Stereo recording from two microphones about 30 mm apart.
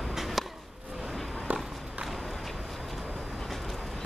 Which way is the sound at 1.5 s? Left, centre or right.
Right.